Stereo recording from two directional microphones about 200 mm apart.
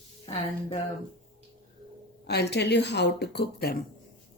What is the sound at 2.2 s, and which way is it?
Speech, 55° left (ahead or behind).